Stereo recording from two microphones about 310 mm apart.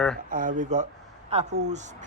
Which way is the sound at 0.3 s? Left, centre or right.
Right.